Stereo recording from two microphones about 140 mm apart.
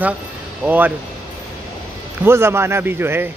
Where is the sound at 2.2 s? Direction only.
20° right (ahead or behind).